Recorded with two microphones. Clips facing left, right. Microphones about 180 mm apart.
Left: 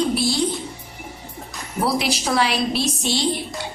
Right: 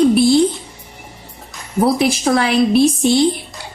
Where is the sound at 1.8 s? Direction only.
50° right (ahead or behind).